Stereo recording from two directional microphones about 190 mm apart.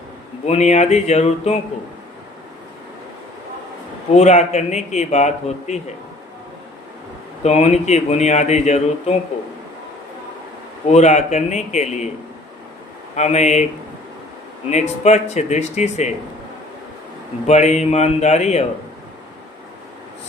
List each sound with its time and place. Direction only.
0.4 s speech: 35° left (ahead or behind)
4.1 s speech: 35° left (ahead or behind)
7.4 s speech: 35° left (ahead or behind)
10.8 s speech: 35° left (ahead or behind)
13.1 s speech: 35° left (ahead or behind)
14.7 s speech: 35° left (ahead or behind)
17.4 s speech: 35° left (ahead or behind)